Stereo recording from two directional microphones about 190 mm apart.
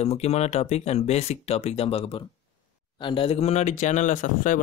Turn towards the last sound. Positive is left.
turn(degrees=45)  # may be behind; listen again after turning